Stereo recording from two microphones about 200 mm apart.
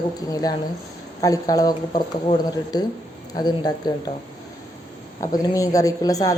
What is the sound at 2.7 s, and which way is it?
Speech, 20° left (ahead or behind).